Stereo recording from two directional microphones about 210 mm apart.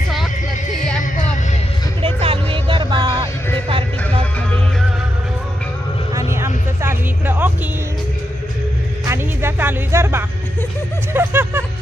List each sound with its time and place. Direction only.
2.0 s a sound: 25° right (ahead or behind)
6.1 s vehicle: 10° right (ahead or behind)
9.0 s music: 10° right (ahead or behind)